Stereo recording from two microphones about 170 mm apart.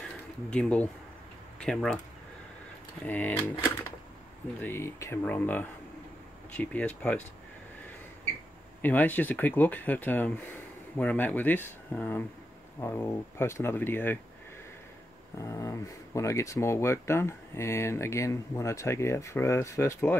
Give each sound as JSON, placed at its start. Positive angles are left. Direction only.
{"t": 0.5, "sound": "speech", "side_deg": 5}
{"t": 3.1, "sound": "speech", "side_deg": 10}
{"t": 4.6, "sound": "speech", "side_deg": 15}
{"t": 8.8, "sound": "speech", "side_deg": 10}
{"t": 15.3, "sound": "speech", "side_deg": 20}